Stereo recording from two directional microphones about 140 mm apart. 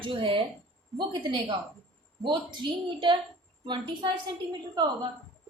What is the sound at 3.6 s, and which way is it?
Speech, 35° right (ahead or behind).